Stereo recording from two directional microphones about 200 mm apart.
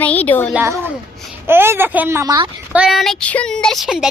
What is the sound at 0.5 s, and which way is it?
A woman's voice, 10° right (ahead or behind).